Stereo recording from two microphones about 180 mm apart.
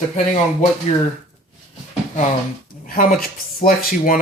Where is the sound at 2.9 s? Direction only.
50° left (ahead or behind).